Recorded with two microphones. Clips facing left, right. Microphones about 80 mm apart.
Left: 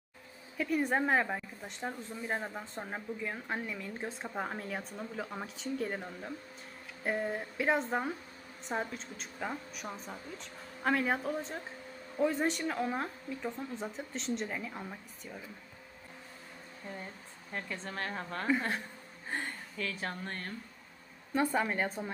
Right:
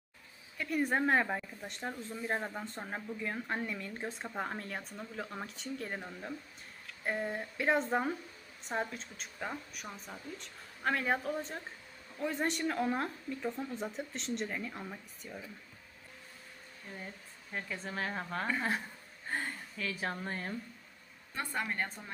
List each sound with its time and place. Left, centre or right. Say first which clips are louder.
0.5 s a woman's voice: left 2 dB; centre
17.5 s a woman's voice: even; centre
21.3 s a woman's voice: left 6 dB; centre